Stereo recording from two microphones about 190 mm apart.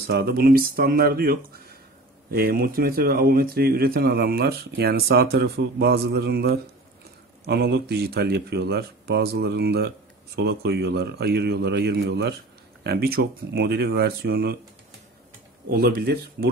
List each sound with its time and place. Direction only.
0.0 s speech: 55° right (ahead or behind)
15.7 s speech: 55° right (ahead or behind)